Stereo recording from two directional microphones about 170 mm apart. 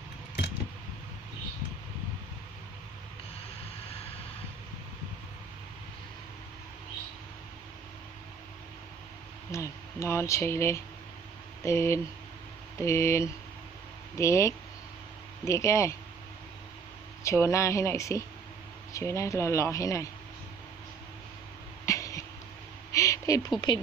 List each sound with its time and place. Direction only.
9.5 s speech: 15° left (ahead or behind)
17.2 s speech: 15° left (ahead or behind)
21.8 s a sound: 20° left (ahead or behind)
23.6 s speech: 30° left (ahead or behind)